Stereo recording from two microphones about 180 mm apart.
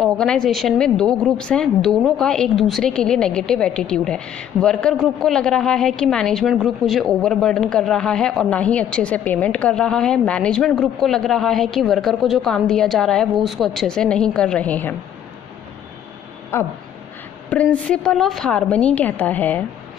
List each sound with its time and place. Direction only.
0.0 s a woman's voice: 5° left (ahead or behind)
16.5 s a woman's voice: 15° left (ahead or behind)